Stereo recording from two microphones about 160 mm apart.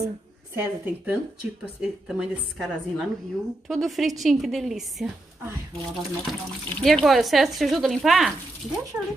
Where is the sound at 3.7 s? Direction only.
Centre (ahead or behind).